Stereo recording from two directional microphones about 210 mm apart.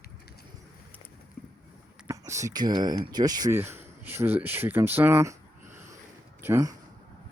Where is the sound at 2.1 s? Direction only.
15° right (ahead or behind).